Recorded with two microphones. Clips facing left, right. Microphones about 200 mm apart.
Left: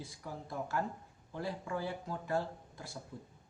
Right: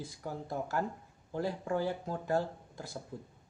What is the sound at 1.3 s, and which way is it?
Speech, 40° right (ahead or behind).